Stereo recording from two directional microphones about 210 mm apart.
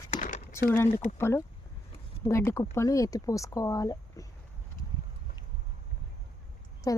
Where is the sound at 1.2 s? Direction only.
15° left (ahead or behind).